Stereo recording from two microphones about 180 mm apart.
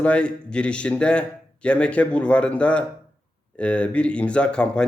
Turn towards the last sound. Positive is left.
turn(degrees=5)  # may be behind; listen again after turning